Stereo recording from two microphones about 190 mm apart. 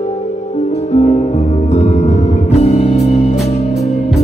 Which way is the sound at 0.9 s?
35° left (ahead or behind).